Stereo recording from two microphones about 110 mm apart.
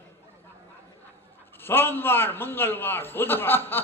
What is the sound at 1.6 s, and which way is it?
A man's voice, 20° left (ahead or behind).